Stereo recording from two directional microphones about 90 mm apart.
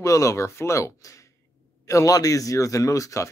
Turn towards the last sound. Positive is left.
turn(degrees=35)  # may be behind; listen again after turning